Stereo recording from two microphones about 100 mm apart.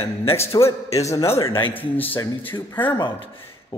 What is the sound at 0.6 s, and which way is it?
A man's voice, 30° left (ahead or behind).